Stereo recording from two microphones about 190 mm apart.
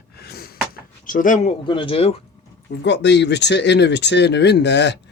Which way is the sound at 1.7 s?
25° left (ahead or behind).